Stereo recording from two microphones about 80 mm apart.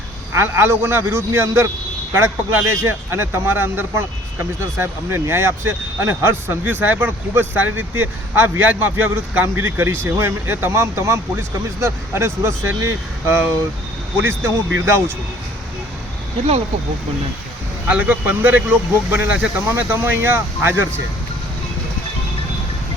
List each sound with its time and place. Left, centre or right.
0.3 s speech: right
17.8 s speech: centre